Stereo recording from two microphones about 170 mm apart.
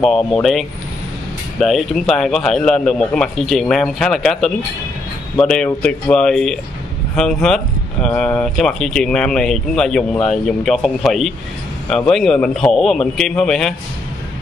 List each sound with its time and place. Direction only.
0.0 s a man's voice: centre (ahead or behind)